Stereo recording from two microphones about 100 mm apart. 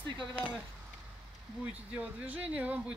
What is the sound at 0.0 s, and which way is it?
Speech, 50° right (ahead or behind).